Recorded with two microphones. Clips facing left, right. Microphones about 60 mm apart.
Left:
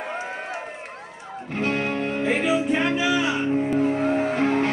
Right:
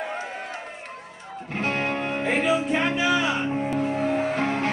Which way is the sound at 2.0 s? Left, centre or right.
Right.